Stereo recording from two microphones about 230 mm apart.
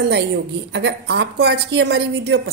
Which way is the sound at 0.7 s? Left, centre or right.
Right.